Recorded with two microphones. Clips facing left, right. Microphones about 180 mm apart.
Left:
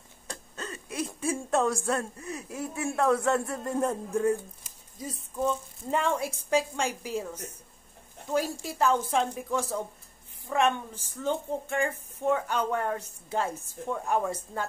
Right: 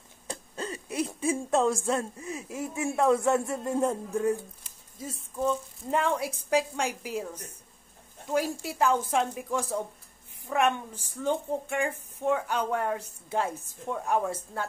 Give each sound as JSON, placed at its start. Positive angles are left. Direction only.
{"t": 0.3, "sound": "a sound", "side_deg": -25}
{"t": 1.3, "sound": "speech", "side_deg": -15}
{"t": 8.3, "sound": "a woman's voice", "side_deg": -10}